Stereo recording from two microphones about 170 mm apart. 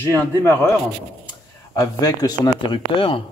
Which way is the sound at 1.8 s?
20° left (ahead or behind).